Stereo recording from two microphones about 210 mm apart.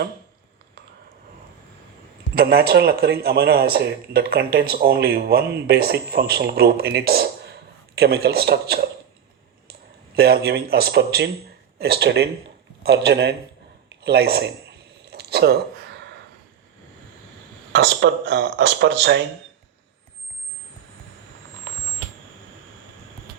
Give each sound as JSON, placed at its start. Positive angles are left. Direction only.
{"t": 2.3, "sound": "speech", "side_deg": -45}
{"t": 10.2, "sound": "speech", "side_deg": -50}
{"t": 14.0, "sound": "a sound", "side_deg": -50}
{"t": 17.7, "sound": "speech", "side_deg": -60}